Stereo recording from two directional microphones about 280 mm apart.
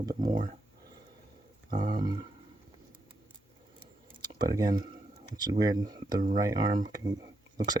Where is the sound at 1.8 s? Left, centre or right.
Right.